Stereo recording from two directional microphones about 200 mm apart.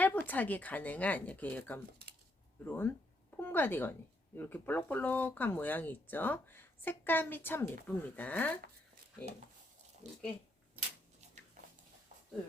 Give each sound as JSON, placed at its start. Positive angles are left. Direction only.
{"t": 0.0, "sound": "speech", "side_deg": 10}
{"t": 10.0, "sound": "speech", "side_deg": -35}